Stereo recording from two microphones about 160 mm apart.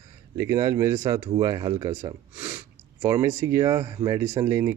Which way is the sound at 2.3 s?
10° right (ahead or behind).